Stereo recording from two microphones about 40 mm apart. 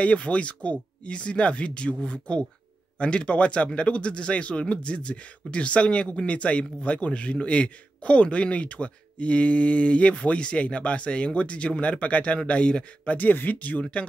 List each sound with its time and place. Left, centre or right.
0.0 s a man's voice: left
13.1 s speech: left